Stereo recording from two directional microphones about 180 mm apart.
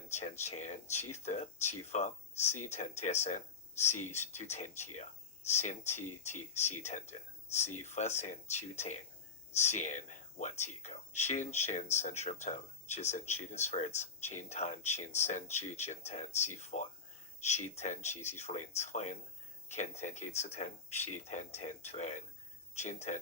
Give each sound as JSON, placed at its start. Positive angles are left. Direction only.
{"t": 0.1, "sound": "speech", "side_deg": 40}